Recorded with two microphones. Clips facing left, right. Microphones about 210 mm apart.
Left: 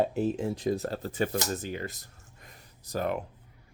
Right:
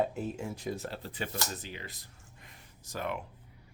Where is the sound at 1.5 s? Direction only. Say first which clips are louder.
Left 9 dB; 45° left (ahead or behind).